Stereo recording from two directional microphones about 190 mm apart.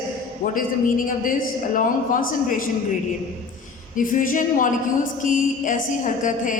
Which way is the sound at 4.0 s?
45° left (ahead or behind).